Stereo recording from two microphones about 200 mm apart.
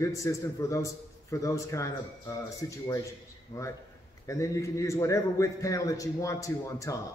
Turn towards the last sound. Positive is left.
turn(degrees=15)  # may be behind; listen again after turning